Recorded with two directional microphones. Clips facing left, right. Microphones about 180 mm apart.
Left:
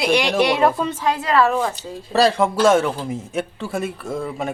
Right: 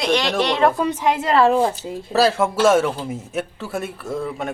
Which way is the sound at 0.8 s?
20° right (ahead or behind).